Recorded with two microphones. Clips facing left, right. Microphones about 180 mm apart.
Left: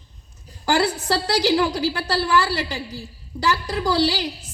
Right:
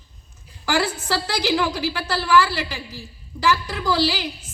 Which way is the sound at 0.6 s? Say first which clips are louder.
Left 2 dB; 35° left (ahead or behind).